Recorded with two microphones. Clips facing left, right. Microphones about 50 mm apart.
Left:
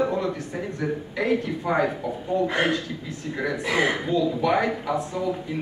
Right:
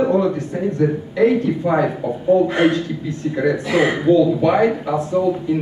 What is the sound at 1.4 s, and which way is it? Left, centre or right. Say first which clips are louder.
Speech: right 6 dB; right.